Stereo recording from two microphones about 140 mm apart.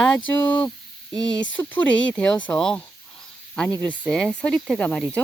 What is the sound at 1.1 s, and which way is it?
Speech, 30° right (ahead or behind).